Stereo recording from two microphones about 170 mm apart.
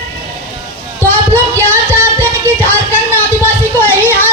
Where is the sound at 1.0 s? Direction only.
15° right (ahead or behind).